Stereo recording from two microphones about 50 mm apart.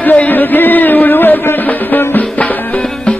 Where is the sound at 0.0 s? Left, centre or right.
Left.